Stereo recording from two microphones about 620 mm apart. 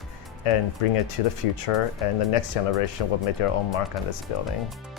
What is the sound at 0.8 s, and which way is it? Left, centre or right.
Speech, left.